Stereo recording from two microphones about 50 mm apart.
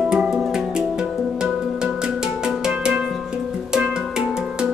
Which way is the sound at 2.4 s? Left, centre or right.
Centre.